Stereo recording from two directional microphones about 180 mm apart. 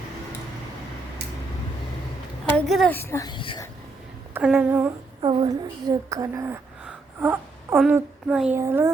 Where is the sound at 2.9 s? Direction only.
15° left (ahead or behind).